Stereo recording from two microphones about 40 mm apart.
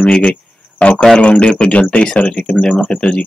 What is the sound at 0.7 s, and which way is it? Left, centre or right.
A man's voice, left.